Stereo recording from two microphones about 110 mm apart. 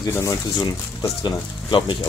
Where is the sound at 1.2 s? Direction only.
45° left (ahead or behind).